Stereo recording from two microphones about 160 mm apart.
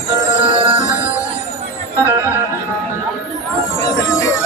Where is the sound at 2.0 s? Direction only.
15° left (ahead or behind).